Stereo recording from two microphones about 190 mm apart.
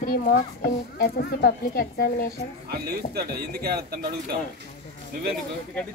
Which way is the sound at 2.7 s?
55° right (ahead or behind).